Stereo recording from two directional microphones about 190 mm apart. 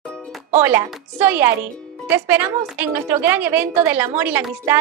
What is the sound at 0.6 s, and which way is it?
A woman's voice, 10° right (ahead or behind).